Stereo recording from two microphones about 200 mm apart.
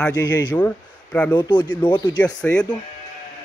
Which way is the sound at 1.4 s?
20° left (ahead or behind).